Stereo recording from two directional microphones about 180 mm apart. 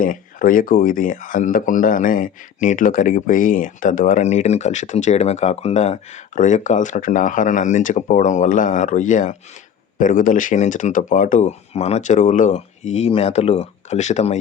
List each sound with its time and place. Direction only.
0.0 s speech: 50° left (ahead or behind)